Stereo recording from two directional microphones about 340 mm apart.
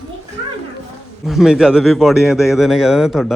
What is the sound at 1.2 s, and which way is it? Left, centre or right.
A man's voice, centre.